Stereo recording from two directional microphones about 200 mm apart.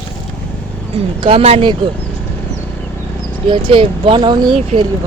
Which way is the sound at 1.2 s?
30° right (ahead or behind).